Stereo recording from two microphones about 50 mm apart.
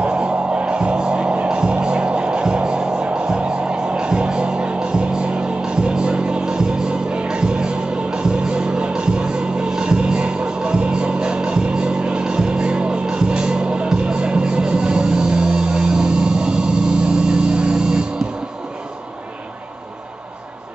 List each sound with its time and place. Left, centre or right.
0.0 s music: right